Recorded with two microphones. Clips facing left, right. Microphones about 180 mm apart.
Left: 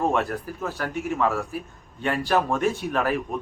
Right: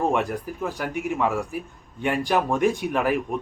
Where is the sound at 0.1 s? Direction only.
15° right (ahead or behind).